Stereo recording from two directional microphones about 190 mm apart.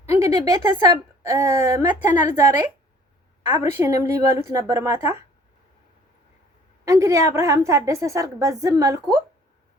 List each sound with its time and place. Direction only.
0.1 s a woman's voice: 20° right (ahead or behind)
3.6 s a woman's voice: 15° right (ahead or behind)
6.8 s a woman's voice: 15° right (ahead or behind)